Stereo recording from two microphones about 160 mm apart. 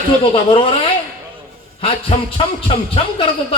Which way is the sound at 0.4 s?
35° left (ahead or behind).